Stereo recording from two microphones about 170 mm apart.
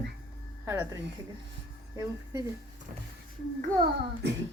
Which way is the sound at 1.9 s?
20° right (ahead or behind).